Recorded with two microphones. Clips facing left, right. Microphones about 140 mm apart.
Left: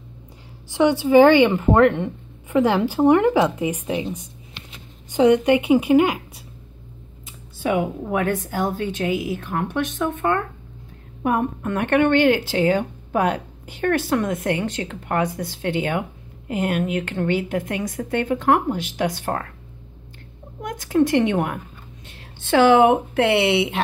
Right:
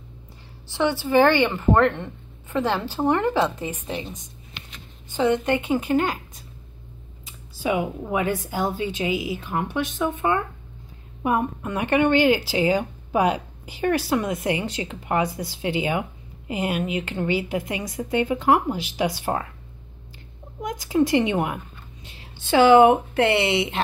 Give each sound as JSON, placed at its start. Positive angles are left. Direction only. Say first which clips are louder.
{"t": 0.7, "sound": "a woman's voice", "louder": "left 5 dB", "side_deg": 15}
{"t": 7.2, "sound": "speech", "louder": "left 2 dB", "side_deg": 0}
{"t": 20.6, "sound": "speech", "louder": "left 2 dB", "side_deg": 0}